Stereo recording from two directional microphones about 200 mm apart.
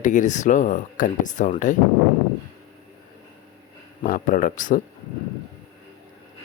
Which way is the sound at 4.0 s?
40° left (ahead or behind).